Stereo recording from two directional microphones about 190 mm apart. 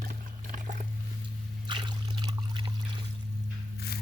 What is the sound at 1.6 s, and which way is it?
Splash, 25° right (ahead or behind).